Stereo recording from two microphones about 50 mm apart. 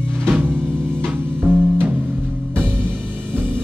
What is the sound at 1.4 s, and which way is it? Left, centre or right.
Music, right.